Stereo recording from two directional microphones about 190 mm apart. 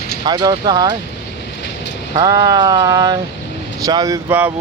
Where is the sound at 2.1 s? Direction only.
20° right (ahead or behind).